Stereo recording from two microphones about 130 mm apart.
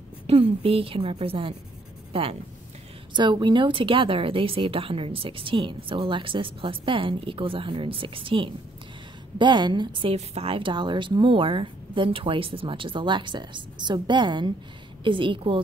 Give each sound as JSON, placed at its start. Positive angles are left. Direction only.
{"t": 0.3, "sound": "a woman's voice", "side_deg": -45}
{"t": 10.1, "sound": "speech", "side_deg": -50}